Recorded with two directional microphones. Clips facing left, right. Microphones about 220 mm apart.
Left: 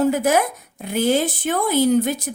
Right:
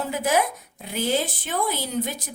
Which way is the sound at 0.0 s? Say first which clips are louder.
Left 6 dB; 45° left (ahead or behind).